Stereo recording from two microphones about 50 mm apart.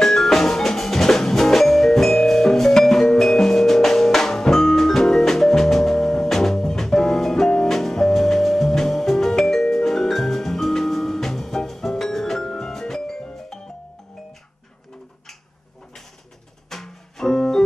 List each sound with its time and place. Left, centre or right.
0.0 s music: centre
16.6 s music: centre